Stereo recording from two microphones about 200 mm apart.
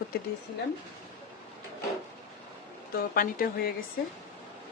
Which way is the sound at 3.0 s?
45° left (ahead or behind).